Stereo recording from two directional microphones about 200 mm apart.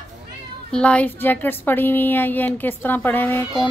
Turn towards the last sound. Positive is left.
turn(degrees=10)  # may be behind; listen again after turning